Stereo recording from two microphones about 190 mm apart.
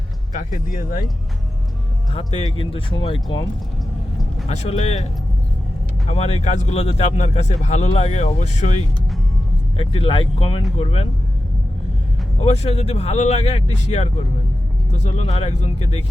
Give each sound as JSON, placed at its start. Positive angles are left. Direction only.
{"t": 0.3, "sound": "speech", "side_deg": 45}
{"t": 2.1, "sound": "speech", "side_deg": 30}
{"t": 4.4, "sound": "speech", "side_deg": 35}
{"t": 6.1, "sound": "speech", "side_deg": 35}
{"t": 12.5, "sound": "speech", "side_deg": 35}